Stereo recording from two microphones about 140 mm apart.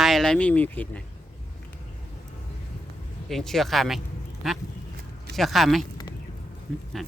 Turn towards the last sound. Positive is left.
turn(degrees=0)  # may be behind; listen again after turning